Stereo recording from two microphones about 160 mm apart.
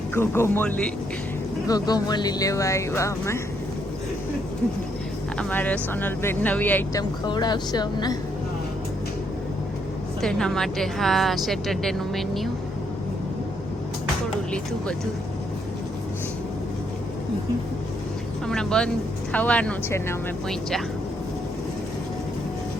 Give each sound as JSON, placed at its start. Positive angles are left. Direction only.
{"t": 0.1, "sound": "speech", "side_deg": 15}
{"t": 1.6, "sound": "speech", "side_deg": 25}
{"t": 5.4, "sound": "speech", "side_deg": 10}
{"t": 7.3, "sound": "speech", "side_deg": 25}
{"t": 10.2, "sound": "a woman's voice", "side_deg": 5}
{"t": 14.5, "sound": "a woman's voice", "side_deg": 5}
{"t": 18.4, "sound": "a woman's voice", "side_deg": 5}